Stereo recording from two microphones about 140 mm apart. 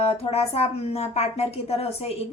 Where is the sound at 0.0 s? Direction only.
50° left (ahead or behind).